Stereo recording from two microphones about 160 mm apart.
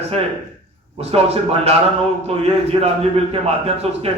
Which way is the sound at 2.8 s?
40° right (ahead or behind).